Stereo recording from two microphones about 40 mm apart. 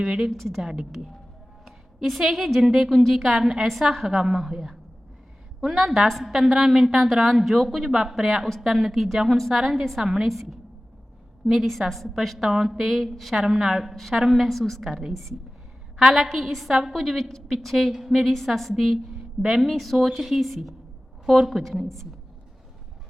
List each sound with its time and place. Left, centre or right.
0.0 s a woman's voice: centre
0.3 s a woman's voice: centre
0.6 s a woman's voice: centre
1.6 s a sound: centre
2.6 s a woman's voice: centre
13.3 s a woman's voice: centre
14.8 s a woman's voice: centre
15.1 s a woman's voice: centre
16.0 s a woman's voice: centre
16.9 s a woman's voice: centre
19.4 s a woman's voice: centre
19.6 s a woman's voice: centre